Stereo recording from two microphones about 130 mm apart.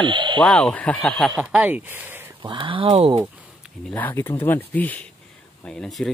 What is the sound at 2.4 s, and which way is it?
Speech, 40° right (ahead or behind).